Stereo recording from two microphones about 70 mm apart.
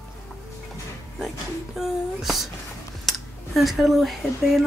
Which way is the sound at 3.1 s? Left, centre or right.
Centre.